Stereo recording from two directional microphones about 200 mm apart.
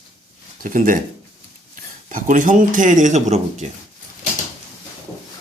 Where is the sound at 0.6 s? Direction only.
40° right (ahead or behind).